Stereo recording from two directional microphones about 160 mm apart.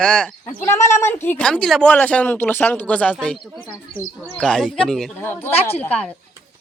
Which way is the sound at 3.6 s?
15° right (ahead or behind).